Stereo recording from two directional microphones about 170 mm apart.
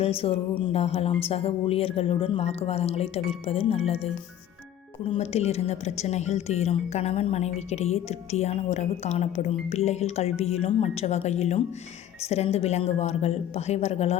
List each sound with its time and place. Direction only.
0.0 s a woman's voice: 35° left (ahead or behind)